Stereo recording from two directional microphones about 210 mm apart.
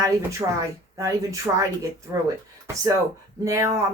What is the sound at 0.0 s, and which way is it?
Speech, 15° right (ahead or behind).